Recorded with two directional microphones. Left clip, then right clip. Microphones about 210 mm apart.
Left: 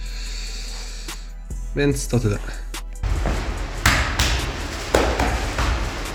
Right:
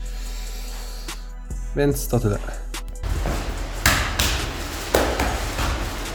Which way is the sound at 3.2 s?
15° left (ahead or behind).